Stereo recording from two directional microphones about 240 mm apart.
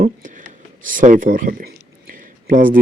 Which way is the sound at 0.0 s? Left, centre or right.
Right.